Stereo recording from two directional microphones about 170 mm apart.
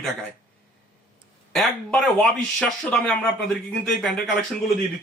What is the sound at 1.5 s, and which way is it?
Speech, centre (ahead or behind).